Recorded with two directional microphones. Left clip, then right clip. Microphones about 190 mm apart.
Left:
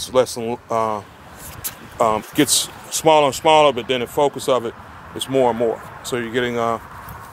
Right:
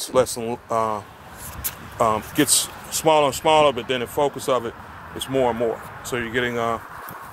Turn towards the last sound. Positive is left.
turn(degrees=25)  # may be behind; listen again after turning